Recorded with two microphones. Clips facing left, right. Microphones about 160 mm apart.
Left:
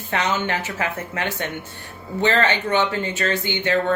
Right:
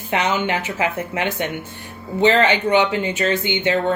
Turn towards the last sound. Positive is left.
turn(degrees=-20)  # may be behind; listen again after turning